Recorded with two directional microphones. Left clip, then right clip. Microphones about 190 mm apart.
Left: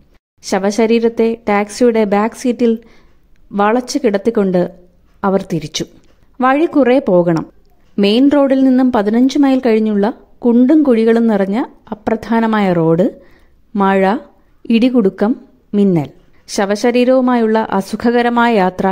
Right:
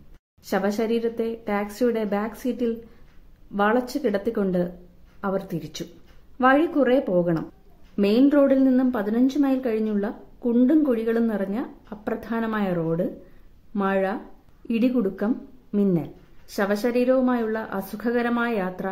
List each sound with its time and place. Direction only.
0.4 s a woman's voice: 35° left (ahead or behind)